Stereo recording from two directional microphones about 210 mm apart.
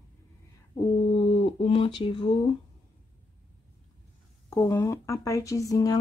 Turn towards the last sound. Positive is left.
turn(degrees=15)  # may be behind; listen again after turning